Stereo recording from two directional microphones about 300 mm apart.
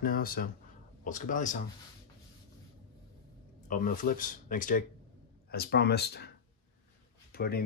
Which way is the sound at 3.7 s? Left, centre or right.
Left.